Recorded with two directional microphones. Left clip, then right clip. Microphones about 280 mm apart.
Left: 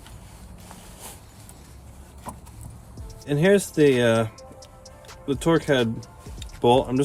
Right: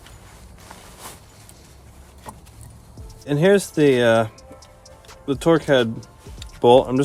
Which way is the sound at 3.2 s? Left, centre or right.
Centre.